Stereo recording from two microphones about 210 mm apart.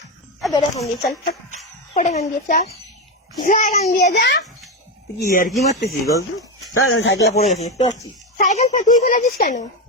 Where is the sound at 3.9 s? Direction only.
45° left (ahead or behind).